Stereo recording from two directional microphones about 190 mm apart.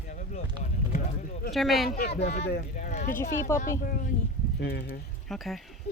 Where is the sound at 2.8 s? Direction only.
40° left (ahead or behind).